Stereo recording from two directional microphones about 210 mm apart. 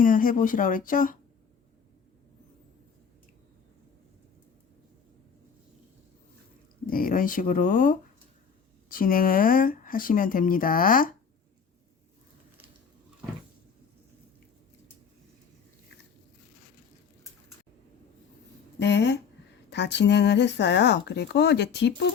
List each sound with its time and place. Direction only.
0.0 s speech: 40° left (ahead or behind)
6.8 s speech: 40° left (ahead or behind)
18.8 s speech: 55° left (ahead or behind)